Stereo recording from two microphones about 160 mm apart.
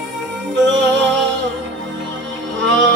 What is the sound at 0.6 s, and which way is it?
Music, 90° right.